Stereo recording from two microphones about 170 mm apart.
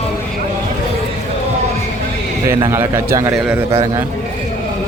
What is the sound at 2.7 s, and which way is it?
Speech, 15° right (ahead or behind).